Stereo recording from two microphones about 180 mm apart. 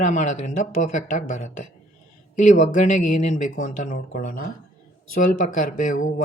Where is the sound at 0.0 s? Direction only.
45° left (ahead or behind).